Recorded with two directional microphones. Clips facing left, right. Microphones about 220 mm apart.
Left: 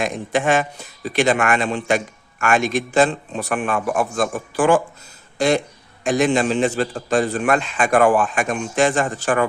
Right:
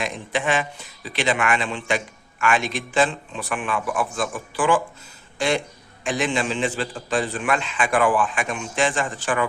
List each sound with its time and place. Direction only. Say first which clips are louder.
0.0 s a man's voice: left 5 dB; 45° left (ahead or behind)